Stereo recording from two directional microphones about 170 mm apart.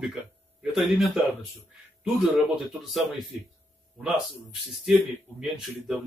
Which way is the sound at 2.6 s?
Centre (ahead or behind).